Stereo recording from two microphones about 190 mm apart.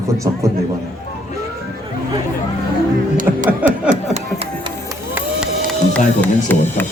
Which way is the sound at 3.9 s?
35° right (ahead or behind).